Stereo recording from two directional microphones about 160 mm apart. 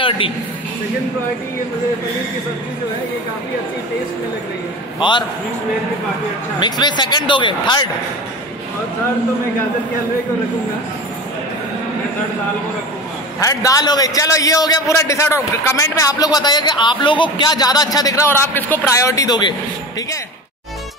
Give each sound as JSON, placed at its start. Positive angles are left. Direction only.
{"t": 5.0, "sound": "a man's voice", "side_deg": 30}
{"t": 6.6, "sound": "a man's voice", "side_deg": 30}
{"t": 13.4, "sound": "a man's voice", "side_deg": 20}